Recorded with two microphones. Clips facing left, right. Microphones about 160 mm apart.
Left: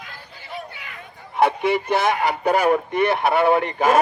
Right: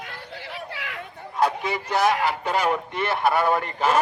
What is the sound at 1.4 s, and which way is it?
Speech, 60° left (ahead or behind).